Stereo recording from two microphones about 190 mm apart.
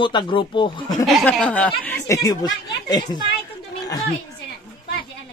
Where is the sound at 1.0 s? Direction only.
Centre (ahead or behind); by 3.1 s 20° left (ahead or behind).